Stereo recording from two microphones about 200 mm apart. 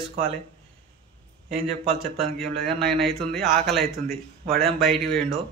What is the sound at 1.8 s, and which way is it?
Speech, 30° right (ahead or behind).